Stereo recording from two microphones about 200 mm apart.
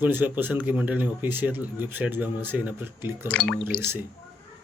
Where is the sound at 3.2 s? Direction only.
5° left (ahead or behind).